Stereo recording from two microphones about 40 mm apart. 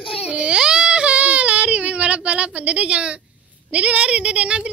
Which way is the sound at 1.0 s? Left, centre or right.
Right.